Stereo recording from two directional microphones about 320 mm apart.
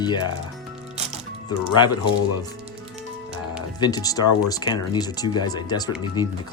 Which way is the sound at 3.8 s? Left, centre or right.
Centre.